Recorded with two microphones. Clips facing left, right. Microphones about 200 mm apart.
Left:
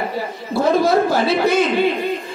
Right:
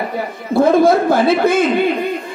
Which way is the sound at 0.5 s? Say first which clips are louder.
Right 5 dB; 55° right (ahead or behind).